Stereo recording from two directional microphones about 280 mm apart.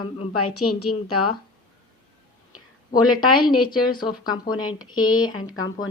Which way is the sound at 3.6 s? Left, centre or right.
Centre.